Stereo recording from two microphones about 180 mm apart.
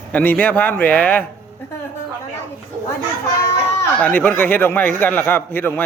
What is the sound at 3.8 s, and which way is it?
A man's voice, 10° left (ahead or behind).